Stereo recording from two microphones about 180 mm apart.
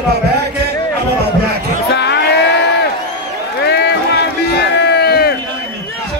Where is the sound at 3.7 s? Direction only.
65° left (ahead or behind).